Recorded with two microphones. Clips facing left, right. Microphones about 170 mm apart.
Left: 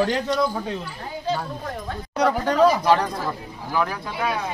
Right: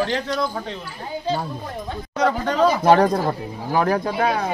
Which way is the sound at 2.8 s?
50° right (ahead or behind).